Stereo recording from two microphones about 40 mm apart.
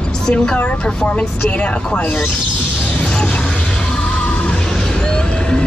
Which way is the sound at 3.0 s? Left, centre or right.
Left.